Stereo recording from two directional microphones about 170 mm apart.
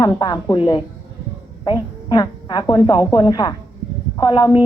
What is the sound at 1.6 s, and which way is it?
A woman's voice, 25° left (ahead or behind).